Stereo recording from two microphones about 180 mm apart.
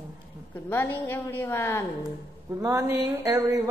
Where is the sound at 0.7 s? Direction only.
10° left (ahead or behind).